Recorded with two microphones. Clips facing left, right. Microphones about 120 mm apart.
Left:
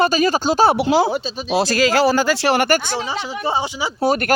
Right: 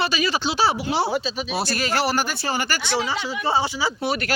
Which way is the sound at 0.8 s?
90° left.